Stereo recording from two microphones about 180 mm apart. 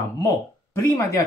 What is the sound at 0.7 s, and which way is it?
Speech, 15° left (ahead or behind).